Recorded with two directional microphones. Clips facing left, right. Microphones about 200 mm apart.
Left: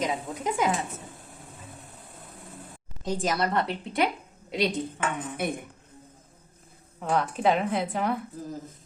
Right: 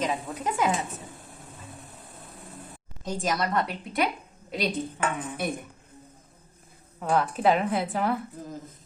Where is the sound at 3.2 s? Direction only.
25° left (ahead or behind).